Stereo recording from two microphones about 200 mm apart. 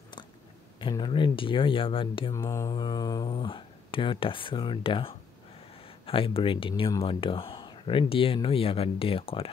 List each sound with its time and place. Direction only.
0.7 s speech: 25° left (ahead or behind)
2.3 s speech: 15° left (ahead or behind)